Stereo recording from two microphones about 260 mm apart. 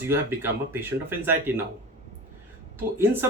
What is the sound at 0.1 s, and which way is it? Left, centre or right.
Speech, centre.